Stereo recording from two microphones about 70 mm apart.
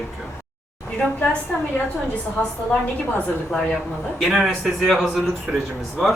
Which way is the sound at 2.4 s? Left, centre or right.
Left.